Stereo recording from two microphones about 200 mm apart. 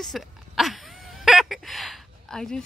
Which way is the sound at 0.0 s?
Centre (ahead or behind).